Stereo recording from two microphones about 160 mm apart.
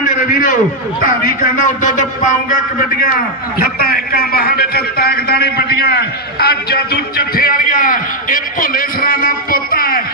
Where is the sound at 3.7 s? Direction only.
70° left (ahead or behind).